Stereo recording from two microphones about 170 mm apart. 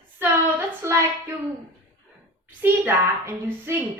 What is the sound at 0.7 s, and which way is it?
Speech, 15° right (ahead or behind).